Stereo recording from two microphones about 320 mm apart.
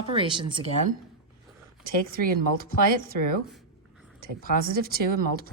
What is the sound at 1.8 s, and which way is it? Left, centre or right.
Speech, right.